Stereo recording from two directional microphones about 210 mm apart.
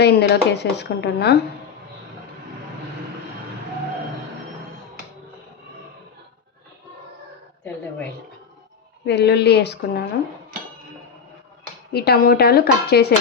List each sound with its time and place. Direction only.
0.0 s speech: 55° left (ahead or behind)
9.0 s speech: 50° left (ahead or behind)
11.9 s speech: 50° left (ahead or behind)